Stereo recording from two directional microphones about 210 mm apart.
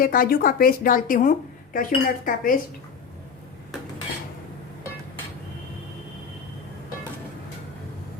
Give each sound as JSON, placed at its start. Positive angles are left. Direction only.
{"t": 0.0, "sound": "a woman's voice", "side_deg": 45}